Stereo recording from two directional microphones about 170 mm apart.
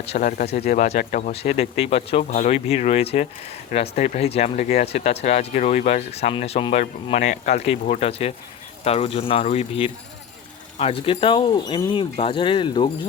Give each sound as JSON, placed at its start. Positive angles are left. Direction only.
{"t": 0.2, "sound": "speech", "side_deg": 55}
{"t": 1.3, "sound": "speech", "side_deg": 35}